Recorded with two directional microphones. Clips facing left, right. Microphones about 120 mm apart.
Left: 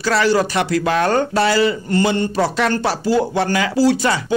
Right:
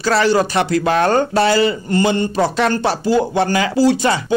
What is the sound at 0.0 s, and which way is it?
Speech, 30° right (ahead or behind).